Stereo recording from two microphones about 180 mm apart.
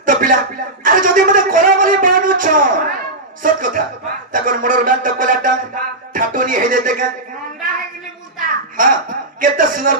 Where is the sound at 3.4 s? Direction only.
50° right (ahead or behind).